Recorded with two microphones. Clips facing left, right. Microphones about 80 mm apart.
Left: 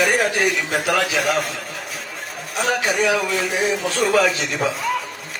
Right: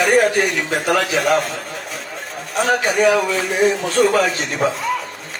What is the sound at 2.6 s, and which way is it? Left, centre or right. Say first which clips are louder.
Speech: right 4 dB; right.